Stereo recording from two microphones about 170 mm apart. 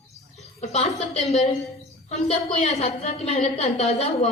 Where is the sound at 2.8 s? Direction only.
35° left (ahead or behind).